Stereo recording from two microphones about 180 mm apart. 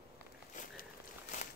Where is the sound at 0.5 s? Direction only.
45° left (ahead or behind).